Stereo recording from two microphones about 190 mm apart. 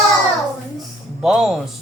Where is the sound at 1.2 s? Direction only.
Centre (ahead or behind).